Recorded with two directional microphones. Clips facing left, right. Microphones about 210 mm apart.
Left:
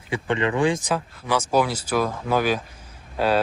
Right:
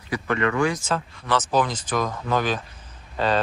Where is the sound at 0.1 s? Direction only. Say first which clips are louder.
Left 1 dB; 30° left (ahead or behind).